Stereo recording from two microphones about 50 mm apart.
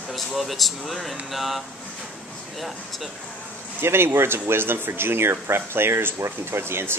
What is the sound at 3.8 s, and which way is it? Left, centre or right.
Speech, right.